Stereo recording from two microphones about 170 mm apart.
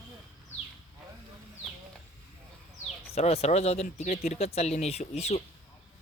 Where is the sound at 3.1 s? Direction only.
40° left (ahead or behind).